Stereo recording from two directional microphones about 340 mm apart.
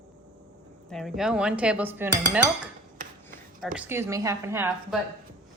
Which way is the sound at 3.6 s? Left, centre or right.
Centre.